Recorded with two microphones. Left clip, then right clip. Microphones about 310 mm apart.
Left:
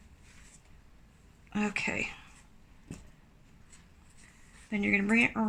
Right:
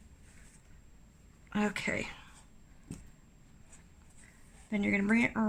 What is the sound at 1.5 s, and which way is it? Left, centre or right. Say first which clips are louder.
Speech: left 1 dB; right.